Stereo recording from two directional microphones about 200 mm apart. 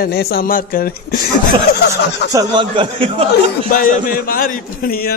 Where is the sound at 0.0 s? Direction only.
50° left (ahead or behind).